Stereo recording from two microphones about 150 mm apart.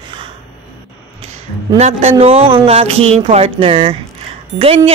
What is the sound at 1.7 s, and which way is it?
Speech, 50° right (ahead or behind).